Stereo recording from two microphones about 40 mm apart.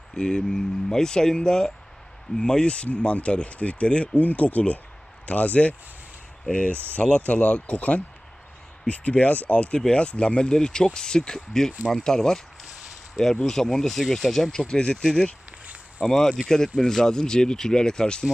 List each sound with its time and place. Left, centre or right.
0.2 s speech: centre
13.4 s speech: centre
14.5 s speech: centre
15.6 s a sound: right
16.6 s speech: centre